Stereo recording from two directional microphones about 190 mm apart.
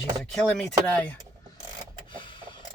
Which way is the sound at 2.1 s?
25° left (ahead or behind).